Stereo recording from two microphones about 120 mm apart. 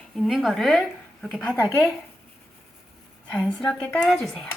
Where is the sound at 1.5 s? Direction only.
25° left (ahead or behind).